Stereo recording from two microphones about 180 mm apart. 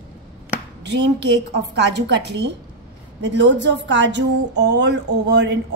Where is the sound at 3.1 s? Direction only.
90° right.